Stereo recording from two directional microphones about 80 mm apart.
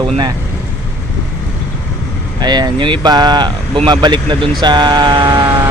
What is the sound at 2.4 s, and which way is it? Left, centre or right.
Speech, right.